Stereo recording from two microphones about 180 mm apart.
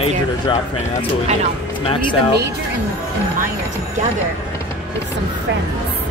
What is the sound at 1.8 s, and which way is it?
Speech, 25° left (ahead or behind).